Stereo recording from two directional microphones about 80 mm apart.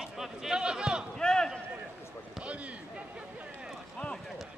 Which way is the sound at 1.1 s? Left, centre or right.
Centre.